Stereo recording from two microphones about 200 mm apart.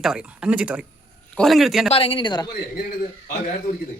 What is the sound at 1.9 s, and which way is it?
Speech, 30° left (ahead or behind).